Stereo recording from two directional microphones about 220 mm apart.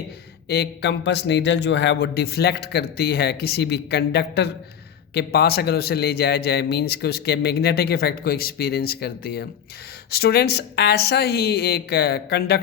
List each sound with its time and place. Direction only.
0.4 s a man's voice: 50° left (ahead or behind)